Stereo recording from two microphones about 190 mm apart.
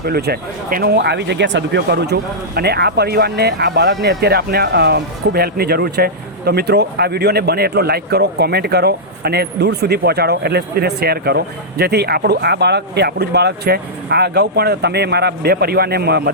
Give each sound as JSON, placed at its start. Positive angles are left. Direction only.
{"t": 0.0, "sound": "speech", "side_deg": -55}